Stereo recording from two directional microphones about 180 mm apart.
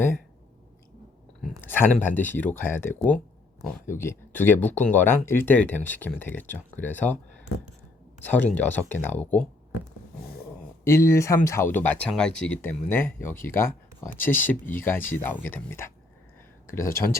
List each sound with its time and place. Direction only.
1.4 s speech: 10° left (ahead or behind)
8.2 s speech: 10° left (ahead or behind)
10.8 s speech: 15° left (ahead or behind)